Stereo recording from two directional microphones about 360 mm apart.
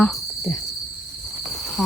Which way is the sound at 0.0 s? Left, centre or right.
Centre.